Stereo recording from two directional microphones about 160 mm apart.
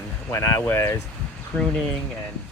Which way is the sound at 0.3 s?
20° left (ahead or behind).